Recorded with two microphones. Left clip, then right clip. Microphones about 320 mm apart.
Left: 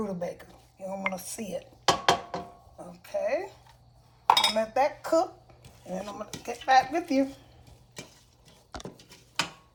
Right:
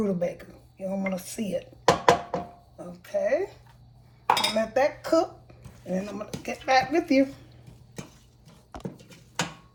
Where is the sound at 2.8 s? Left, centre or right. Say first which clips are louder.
Right 4 dB; centre.